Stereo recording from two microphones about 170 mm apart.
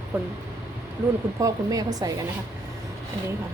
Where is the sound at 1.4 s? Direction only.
20° right (ahead or behind).